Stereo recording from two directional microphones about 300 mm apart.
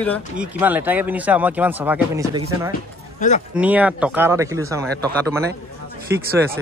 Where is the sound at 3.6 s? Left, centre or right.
Centre.